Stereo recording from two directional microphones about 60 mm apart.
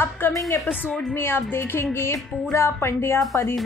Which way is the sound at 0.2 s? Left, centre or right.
Left.